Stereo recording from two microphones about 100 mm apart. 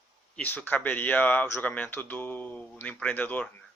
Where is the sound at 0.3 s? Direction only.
15° left (ahead or behind).